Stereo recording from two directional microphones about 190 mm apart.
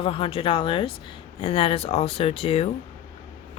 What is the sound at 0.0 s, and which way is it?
Speech, 30° left (ahead or behind).